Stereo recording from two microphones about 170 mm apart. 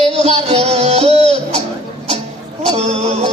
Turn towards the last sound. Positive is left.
turn(degrees=-40)  # may be behind; listen again after turning